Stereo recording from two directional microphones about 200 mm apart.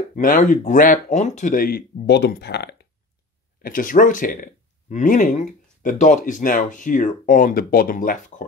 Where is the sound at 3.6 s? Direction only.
45° left (ahead or behind).